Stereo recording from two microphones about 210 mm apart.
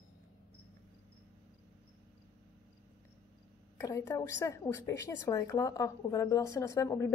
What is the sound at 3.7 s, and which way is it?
A woman's voice, 15° left (ahead or behind).